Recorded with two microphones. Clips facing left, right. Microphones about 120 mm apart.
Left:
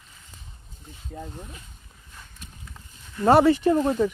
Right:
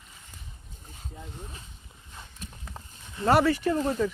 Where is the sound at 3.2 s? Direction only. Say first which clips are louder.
Left 5 dB; 25° left (ahead or behind).